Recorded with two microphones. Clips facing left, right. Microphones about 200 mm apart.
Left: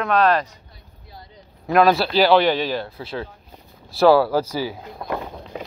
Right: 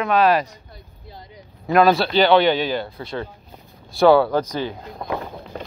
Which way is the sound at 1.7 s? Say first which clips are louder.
Right 1 dB; centre (ahead or behind).